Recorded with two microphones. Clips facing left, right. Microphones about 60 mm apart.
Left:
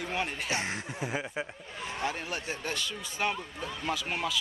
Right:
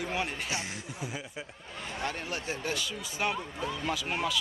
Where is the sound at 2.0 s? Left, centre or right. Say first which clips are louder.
Left 1 dB; centre.